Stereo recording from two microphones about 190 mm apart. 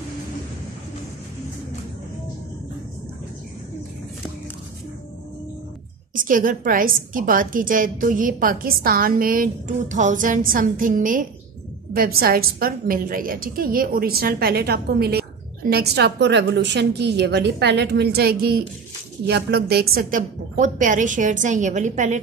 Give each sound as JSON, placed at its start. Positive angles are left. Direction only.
{"t": 6.1, "sound": "a woman's voice", "side_deg": -45}